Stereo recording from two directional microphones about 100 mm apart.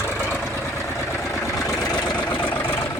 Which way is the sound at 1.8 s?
10° left (ahead or behind).